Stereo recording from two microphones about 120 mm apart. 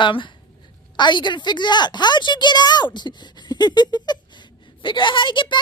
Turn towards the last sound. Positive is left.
turn(degrees=40)  # may be behind; listen again after turning